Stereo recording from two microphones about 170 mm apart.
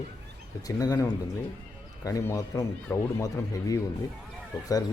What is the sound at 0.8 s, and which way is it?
Speech, 20° left (ahead or behind).